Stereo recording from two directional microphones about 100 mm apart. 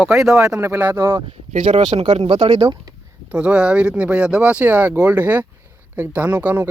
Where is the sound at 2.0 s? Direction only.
75° right (ahead or behind).